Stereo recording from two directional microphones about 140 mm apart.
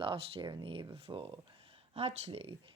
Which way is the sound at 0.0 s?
40° right (ahead or behind).